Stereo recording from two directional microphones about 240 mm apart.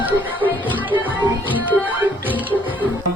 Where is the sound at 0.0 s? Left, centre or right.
Centre.